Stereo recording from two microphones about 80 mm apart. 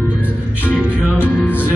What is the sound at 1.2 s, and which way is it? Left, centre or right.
Music, left.